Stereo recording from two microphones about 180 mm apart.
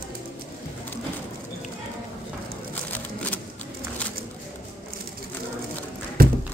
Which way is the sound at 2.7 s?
10° left (ahead or behind).